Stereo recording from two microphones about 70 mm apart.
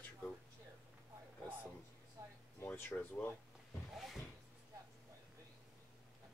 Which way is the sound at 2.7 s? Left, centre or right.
Left.